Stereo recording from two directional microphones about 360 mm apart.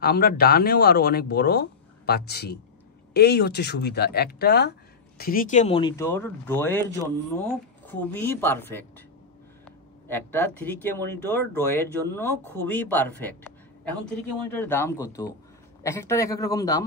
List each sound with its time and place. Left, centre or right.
0.0 s speech: left; by 8.8 s centre
10.0 s speech: centre
14.5 s a man's voice: centre